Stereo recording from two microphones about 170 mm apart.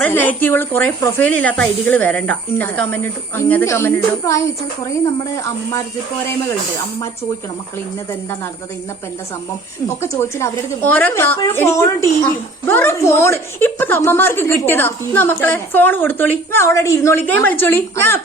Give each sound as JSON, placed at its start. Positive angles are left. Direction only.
{"t": 0.0, "sound": "a woman's voice", "side_deg": 10}
{"t": 10.0, "sound": "a woman's voice", "side_deg": 15}